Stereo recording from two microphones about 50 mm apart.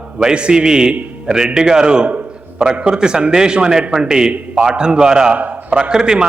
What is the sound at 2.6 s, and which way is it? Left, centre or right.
A man's voice, centre.